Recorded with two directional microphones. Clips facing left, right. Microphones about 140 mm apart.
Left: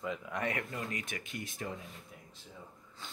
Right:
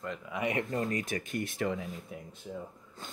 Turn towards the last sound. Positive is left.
turn(degrees=-50)  # may be behind; listen again after turning